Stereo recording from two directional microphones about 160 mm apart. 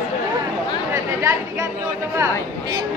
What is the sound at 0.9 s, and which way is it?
Speech, 15° right (ahead or behind).